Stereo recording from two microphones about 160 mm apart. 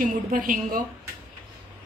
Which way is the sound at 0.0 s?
60° right (ahead or behind).